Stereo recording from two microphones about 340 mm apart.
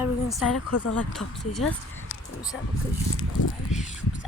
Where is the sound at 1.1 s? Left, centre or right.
Centre.